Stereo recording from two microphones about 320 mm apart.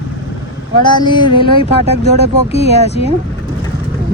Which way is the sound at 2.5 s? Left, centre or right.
Centre.